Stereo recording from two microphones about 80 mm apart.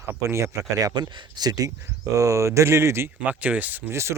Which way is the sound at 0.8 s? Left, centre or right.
Right.